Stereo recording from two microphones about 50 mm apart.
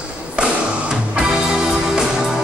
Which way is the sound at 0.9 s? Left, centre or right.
Centre.